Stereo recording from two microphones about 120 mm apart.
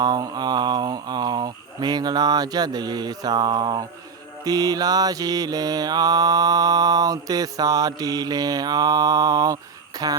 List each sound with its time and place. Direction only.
0.0 s mantra: 35° right (ahead or behind)